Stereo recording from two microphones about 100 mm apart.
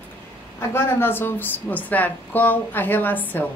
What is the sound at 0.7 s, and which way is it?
A woman's voice, 20° left (ahead or behind).